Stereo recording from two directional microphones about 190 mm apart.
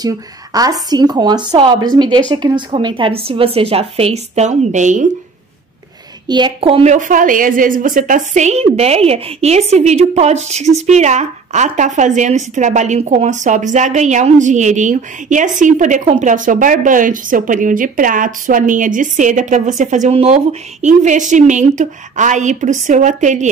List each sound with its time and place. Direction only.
0.0 s a woman's voice: 20° right (ahead or behind); by 5.0 s 40° right (ahead or behind)
6.2 s a woman's voice: 25° right (ahead or behind); by 23.5 s 40° right (ahead or behind)